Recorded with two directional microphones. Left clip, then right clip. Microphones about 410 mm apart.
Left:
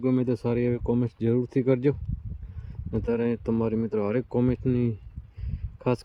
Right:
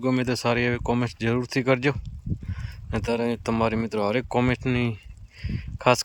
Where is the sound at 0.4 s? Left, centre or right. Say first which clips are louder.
Right 3 dB; right.